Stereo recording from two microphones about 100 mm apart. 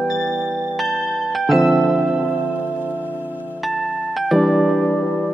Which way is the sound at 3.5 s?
Centre (ahead or behind).